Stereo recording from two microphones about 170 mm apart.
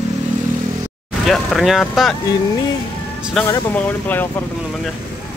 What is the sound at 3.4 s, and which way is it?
Speech, 15° left (ahead or behind).